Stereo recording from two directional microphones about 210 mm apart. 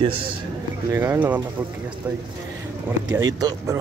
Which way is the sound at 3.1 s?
15° right (ahead or behind).